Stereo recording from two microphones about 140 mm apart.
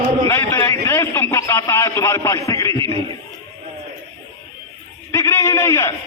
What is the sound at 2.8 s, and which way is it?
Speech, 40° right (ahead or behind).